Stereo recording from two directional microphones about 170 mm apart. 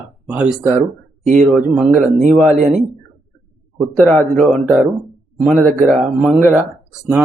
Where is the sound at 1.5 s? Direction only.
Centre (ahead or behind).